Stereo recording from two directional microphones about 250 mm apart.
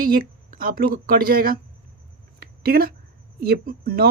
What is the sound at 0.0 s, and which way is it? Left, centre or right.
Speech, right.